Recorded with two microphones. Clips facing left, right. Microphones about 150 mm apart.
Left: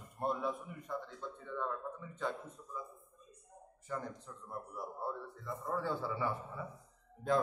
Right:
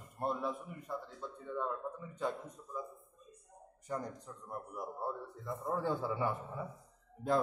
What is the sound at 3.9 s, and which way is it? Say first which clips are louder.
A man's voice: right 2 dB; 15° right (ahead or behind).